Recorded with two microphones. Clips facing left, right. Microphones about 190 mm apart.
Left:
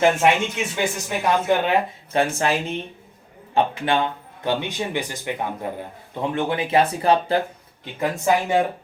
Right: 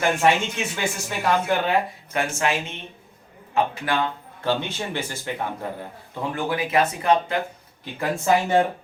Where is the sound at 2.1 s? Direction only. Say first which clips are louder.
Left 3 dB; 35° left (ahead or behind).